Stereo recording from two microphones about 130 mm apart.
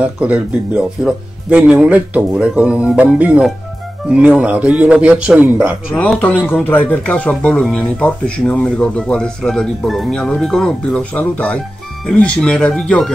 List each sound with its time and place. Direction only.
0.0 s speech: 10° right (ahead or behind)
5.9 s speech: 10° left (ahead or behind)